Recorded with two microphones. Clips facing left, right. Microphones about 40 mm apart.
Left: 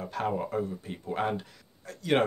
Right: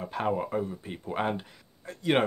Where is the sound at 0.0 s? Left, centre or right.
Right.